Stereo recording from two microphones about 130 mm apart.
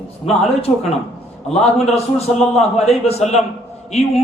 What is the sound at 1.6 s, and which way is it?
A man's voice, 55° left (ahead or behind).